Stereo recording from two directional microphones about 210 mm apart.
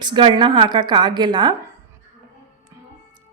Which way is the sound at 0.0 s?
20° right (ahead or behind).